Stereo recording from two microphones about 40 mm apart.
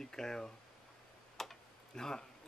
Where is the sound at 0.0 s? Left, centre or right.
Centre.